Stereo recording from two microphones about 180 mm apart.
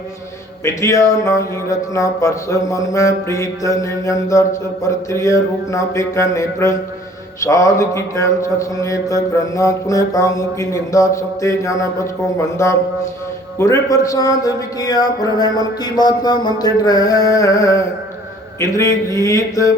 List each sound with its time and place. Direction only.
0.6 s mantra: 15° left (ahead or behind)
13.6 s a man's voice: 20° left (ahead or behind)
18.6 s mantra: 15° left (ahead or behind)